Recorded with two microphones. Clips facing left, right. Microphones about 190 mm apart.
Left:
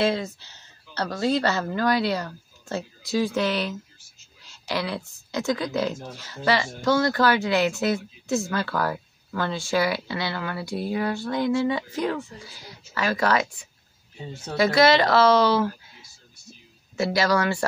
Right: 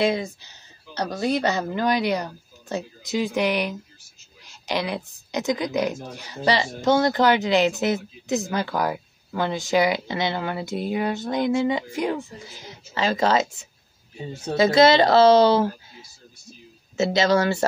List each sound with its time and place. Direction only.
0.0 s speech: 15° right (ahead or behind)
16.9 s speech: 25° right (ahead or behind)